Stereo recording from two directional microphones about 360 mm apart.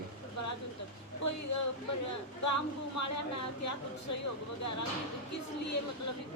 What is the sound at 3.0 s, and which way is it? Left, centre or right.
Speech, left.